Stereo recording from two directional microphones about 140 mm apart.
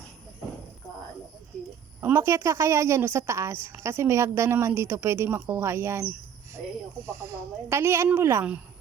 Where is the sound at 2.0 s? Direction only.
20° right (ahead or behind).